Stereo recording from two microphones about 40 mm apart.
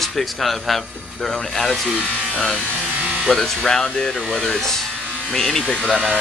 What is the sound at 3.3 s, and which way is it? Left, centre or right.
Speech, centre.